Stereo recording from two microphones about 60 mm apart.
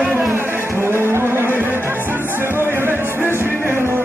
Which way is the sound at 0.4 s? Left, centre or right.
Right.